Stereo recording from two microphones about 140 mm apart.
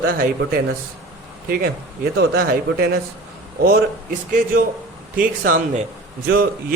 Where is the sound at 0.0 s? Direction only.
90° right.